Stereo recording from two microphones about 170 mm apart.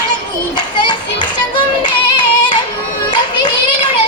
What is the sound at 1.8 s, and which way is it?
Yodeling, 25° left (ahead or behind).